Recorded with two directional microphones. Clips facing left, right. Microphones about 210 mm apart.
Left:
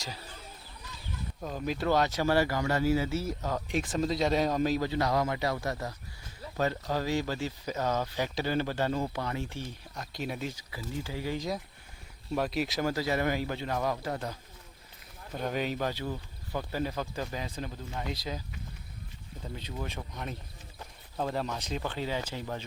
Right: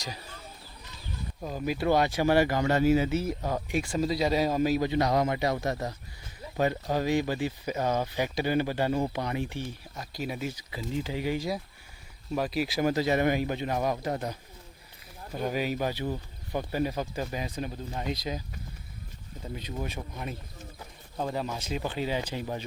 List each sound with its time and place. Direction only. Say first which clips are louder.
1.4 s speech: right 2 dB; 10° right (ahead or behind)
6.9 s speech: right 4 dB; 15° right (ahead or behind)
9.9 s speech: even; centre (ahead or behind)
10.7 s a man's voice: right 5 dB; 20° right (ahead or behind)
11.3 s speech: right 2 dB; 5° right (ahead or behind)
12.8 s a man's voice: right 5 dB; 20° right (ahead or behind)
15.3 s speech: right 2 dB; 5° right (ahead or behind)
19.5 s speech: right 3 dB; 15° right (ahead or behind)